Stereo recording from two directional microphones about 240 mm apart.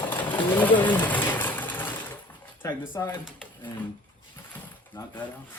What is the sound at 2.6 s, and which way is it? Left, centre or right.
Speech, centre.